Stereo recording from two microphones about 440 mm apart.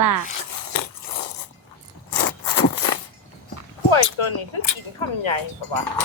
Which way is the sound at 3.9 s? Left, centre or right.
Left.